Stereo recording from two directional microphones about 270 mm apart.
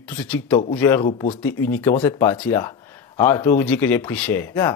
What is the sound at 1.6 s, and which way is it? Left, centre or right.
Speech, centre.